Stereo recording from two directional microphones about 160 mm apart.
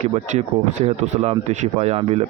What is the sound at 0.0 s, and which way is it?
Speech, 45° right (ahead or behind).